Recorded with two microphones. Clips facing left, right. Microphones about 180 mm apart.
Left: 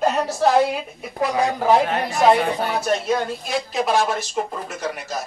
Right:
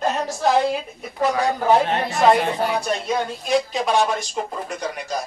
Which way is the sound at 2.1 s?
Centre (ahead or behind).